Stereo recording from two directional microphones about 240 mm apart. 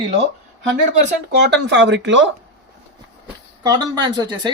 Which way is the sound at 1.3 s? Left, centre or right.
Right.